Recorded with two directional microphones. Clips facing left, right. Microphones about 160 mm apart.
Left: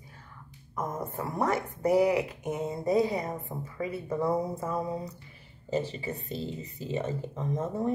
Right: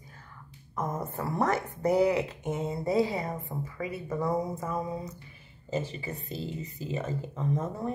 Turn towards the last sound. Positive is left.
turn(degrees=30)  # may be behind; listen again after turning